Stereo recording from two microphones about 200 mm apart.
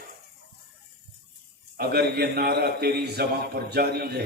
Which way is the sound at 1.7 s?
50° right (ahead or behind).